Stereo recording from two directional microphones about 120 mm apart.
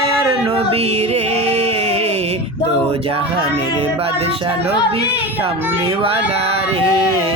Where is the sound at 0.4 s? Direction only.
50° right (ahead or behind).